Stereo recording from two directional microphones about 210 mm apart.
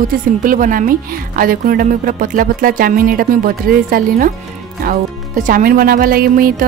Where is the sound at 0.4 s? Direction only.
40° right (ahead or behind).